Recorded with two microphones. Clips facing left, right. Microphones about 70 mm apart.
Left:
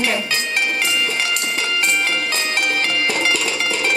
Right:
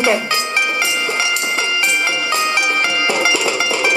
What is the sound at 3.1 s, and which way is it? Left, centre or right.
Music, centre.